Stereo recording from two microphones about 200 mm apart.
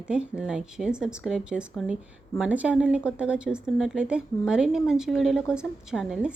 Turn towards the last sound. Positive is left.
turn(degrees=-5)  # may be behind; listen again after turning